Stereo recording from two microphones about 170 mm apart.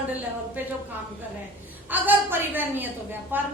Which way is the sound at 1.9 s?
10° right (ahead or behind).